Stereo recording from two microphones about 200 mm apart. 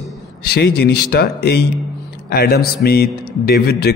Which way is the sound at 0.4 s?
55° left (ahead or behind).